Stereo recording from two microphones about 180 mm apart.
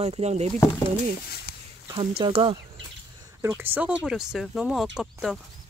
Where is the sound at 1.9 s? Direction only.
25° right (ahead or behind).